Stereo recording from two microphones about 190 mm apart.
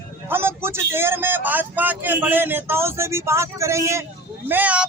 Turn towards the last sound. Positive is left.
turn(degrees=-5)  # may be behind; listen again after turning